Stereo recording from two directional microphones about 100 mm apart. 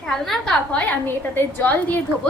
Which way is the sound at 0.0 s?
5° left (ahead or behind).